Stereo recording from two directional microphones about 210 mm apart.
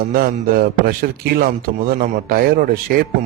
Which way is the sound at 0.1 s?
45° right (ahead or behind).